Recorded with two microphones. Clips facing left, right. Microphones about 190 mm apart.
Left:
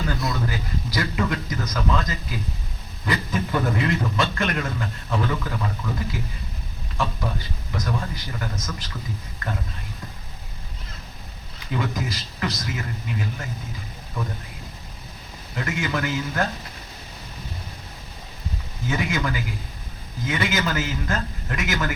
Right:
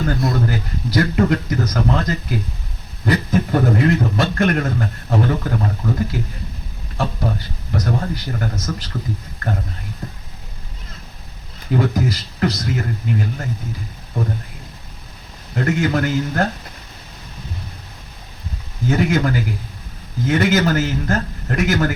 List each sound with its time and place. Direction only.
0.0 s a man's voice: 50° right (ahead or behind)
3.1 s a man's voice: 45° right (ahead or behind)
8.5 s a man's voice: 65° right (ahead or behind)
11.7 s a man's voice: 50° right (ahead or behind)
15.5 s a man's voice: 50° right (ahead or behind)
18.9 s a man's voice: 50° right (ahead or behind)